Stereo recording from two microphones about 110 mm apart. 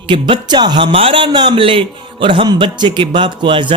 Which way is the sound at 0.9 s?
55° right (ahead or behind).